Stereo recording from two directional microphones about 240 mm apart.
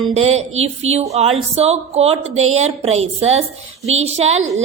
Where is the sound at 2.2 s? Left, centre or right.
Right.